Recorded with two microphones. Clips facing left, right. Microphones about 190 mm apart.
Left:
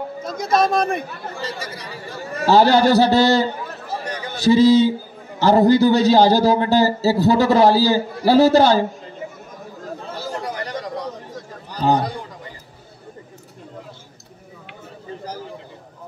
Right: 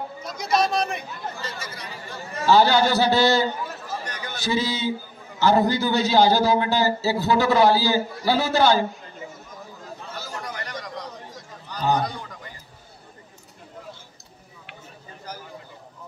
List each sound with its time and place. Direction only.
0.2 s speech: 50° left (ahead or behind)
1.4 s a man's voice: 35° left (ahead or behind)
3.9 s a sound: 30° left (ahead or behind)
5.4 s a man's voice: 35° left (ahead or behind)
10.0 s chatter: 30° left (ahead or behind)
11.7 s a sound: 30° left (ahead or behind)